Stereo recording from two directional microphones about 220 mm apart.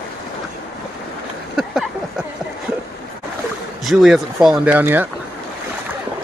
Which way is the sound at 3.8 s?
Centre (ahead or behind).